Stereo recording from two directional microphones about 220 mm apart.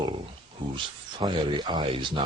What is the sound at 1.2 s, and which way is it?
Speech, 20° right (ahead or behind).